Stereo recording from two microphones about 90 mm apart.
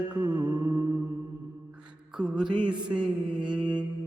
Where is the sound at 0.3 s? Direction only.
15° right (ahead or behind).